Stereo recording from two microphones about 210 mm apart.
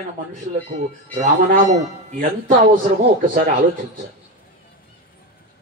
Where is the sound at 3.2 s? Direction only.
40° right (ahead or behind).